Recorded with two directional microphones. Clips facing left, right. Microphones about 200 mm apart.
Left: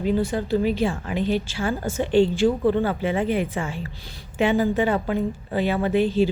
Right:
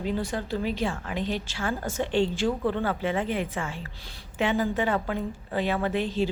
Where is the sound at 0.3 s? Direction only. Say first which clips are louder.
Left 7 dB; 5° left (ahead or behind).